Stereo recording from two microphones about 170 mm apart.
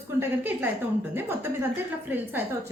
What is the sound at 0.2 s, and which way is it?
A woman's voice, 10° right (ahead or behind).